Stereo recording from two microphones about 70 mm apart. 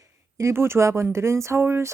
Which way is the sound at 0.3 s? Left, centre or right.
Right.